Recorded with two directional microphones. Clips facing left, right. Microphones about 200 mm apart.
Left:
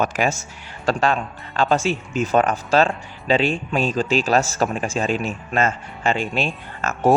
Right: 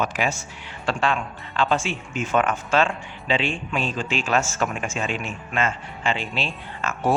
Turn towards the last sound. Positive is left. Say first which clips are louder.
# left 5 dB
turn(degrees=45)  # may be behind; listen again after turning